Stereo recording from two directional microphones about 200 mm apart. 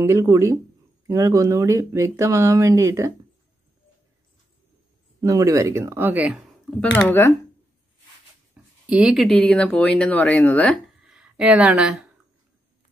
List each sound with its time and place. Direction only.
0.0 s speech: 15° right (ahead or behind)
5.2 s speech: 15° right (ahead or behind)
7.1 s speech: 10° left (ahead or behind)
8.8 s speech: 5° right (ahead or behind)
11.0 s a sound: 5° right (ahead or behind)